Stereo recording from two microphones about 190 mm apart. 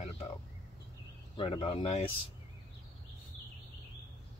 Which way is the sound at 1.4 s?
30° left (ahead or behind).